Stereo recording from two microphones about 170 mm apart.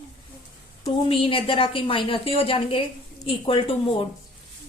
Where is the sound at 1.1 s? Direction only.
30° left (ahead or behind).